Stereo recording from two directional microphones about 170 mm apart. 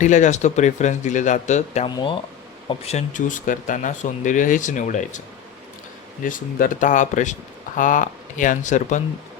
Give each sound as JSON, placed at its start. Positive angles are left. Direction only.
{"t": 0.0, "sound": "speech", "side_deg": 45}
{"t": 2.0, "sound": "speech", "side_deg": 30}
{"t": 6.2, "sound": "speech", "side_deg": 50}